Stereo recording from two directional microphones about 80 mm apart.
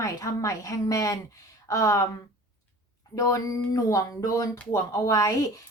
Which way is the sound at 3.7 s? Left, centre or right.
Left.